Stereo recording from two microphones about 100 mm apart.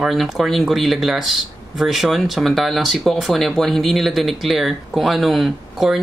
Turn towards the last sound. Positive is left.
turn(degrees=0)  # may be behind; listen again after turning